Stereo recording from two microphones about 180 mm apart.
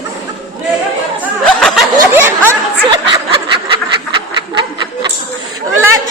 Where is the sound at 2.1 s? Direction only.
15° right (ahead or behind).